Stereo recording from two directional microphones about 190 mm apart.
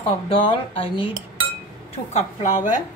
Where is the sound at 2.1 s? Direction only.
40° left (ahead or behind).